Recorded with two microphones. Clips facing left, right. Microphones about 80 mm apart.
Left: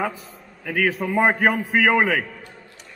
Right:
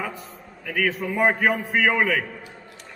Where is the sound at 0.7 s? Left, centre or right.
Centre.